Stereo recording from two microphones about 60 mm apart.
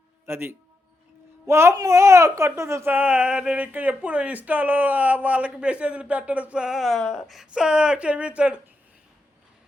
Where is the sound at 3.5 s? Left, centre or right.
Right.